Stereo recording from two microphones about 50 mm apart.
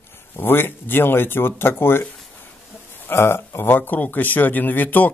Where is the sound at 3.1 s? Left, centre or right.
Left.